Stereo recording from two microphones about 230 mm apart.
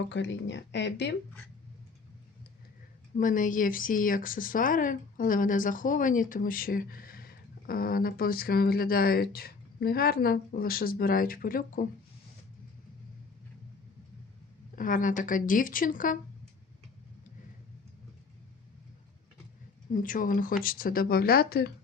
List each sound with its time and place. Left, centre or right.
0.1 s speech: left
3.2 s speech: left
14.8 s speech: left
19.9 s speech: left